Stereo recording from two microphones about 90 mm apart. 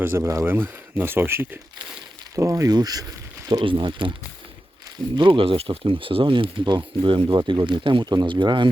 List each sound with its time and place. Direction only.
0.0 s speech: 25° right (ahead or behind)
2.3 s speech: 35° right (ahead or behind)
3.6 s speech: 65° right (ahead or behind)
5.1 s speech: 75° right (ahead or behind)